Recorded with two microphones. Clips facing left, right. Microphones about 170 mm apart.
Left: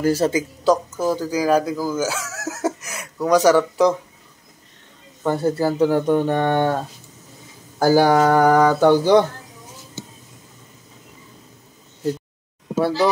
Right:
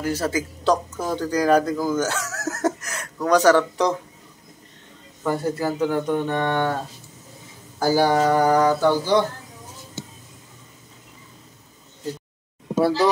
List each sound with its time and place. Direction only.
0.0 s speech: 30° left (ahead or behind)
0.7 s speech: 5° left (ahead or behind)
5.2 s speech: 25° left (ahead or behind); by 6.7 s 45° left (ahead or behind)
7.8 s speech: 55° left (ahead or behind)